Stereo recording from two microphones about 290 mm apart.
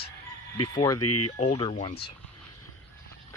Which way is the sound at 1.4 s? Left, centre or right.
Centre.